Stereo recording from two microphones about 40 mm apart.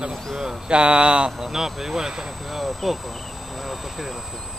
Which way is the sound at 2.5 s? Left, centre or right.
Centre.